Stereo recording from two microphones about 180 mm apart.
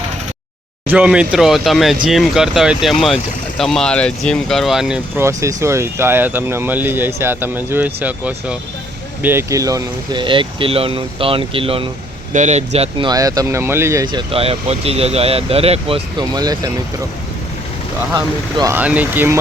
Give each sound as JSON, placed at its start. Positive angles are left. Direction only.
{"t": 0.9, "sound": "speech", "side_deg": -5}
{"t": 5.2, "sound": "speech", "side_deg": -15}
{"t": 13.1, "sound": "speech", "side_deg": -20}
{"t": 18.1, "sound": "speech", "side_deg": -20}
{"t": 18.8, "sound": "speech", "side_deg": -10}